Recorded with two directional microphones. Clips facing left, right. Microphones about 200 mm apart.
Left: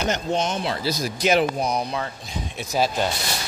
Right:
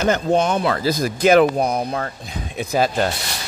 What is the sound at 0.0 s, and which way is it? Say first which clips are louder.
A man's voice: right 6 dB; 55° right (ahead or behind).